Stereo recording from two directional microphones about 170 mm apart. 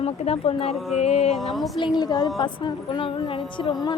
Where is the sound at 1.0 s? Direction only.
35° left (ahead or behind).